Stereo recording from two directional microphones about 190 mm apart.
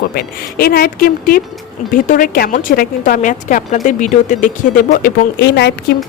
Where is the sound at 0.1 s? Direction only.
55° left (ahead or behind).